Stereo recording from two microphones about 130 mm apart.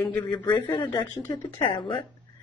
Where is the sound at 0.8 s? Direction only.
35° left (ahead or behind).